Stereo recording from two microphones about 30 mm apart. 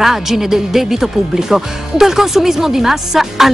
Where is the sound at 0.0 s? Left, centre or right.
Centre.